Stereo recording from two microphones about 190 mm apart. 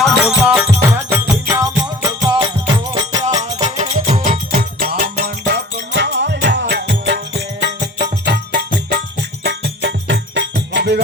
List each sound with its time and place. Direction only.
0.0 s music: 5° right (ahead or behind); by 3.2 s 20° right (ahead or behind)
3.6 s music: 40° right (ahead or behind); by 11.0 s 65° right (ahead or behind)